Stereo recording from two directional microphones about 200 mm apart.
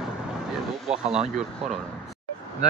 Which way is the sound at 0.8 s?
5° right (ahead or behind).